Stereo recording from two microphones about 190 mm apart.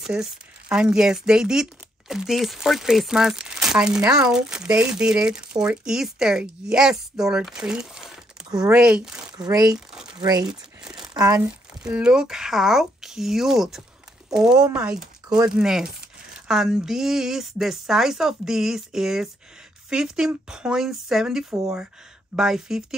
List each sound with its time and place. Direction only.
0.0 s speech: 5° right (ahead or behind)
9.5 s speech: 20° right (ahead or behind)
10.5 s crumpling: 5° right (ahead or behind)
11.1 s speech: 15° right (ahead or behind)
11.8 s speech: 5° right (ahead or behind)